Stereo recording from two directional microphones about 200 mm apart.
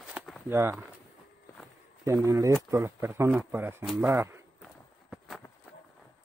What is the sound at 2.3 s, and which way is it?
Speech, 15° right (ahead or behind).